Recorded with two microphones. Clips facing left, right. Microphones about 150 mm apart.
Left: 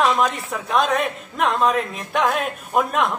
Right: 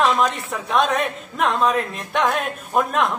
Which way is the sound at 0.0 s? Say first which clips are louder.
Even; centre (ahead or behind).